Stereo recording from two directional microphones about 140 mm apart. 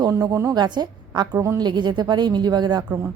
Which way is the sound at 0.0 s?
25° right (ahead or behind).